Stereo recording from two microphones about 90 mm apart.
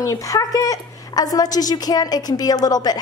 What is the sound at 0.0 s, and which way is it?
A woman's voice, 35° left (ahead or behind).